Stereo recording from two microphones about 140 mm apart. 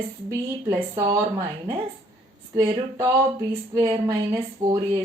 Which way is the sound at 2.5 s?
20° right (ahead or behind).